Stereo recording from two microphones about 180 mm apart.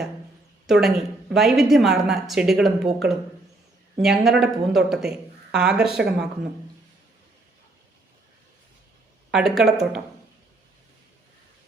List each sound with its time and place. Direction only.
0.7 s a woman's voice: centre (ahead or behind)
9.3 s a woman's voice: centre (ahead or behind)